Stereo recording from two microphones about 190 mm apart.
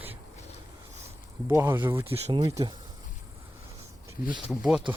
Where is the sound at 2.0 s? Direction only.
30° right (ahead or behind).